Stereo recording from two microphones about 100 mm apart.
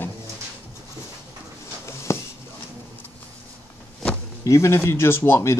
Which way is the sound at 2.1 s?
30° left (ahead or behind).